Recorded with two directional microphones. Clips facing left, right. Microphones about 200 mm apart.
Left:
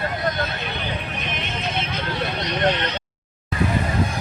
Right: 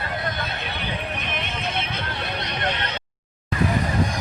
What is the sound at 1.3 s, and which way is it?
Vehicle, 55° right (ahead or behind).